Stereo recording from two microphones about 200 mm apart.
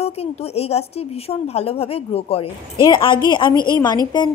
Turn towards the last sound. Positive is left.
turn(degrees=20)  # may be behind; listen again after turning